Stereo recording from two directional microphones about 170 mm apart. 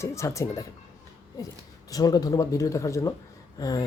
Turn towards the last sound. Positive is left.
turn(degrees=20)  # may be behind; listen again after turning